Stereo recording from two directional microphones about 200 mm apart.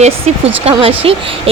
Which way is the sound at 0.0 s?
30° right (ahead or behind).